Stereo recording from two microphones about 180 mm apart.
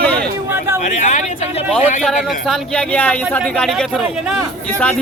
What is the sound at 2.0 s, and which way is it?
Speech, centre (ahead or behind).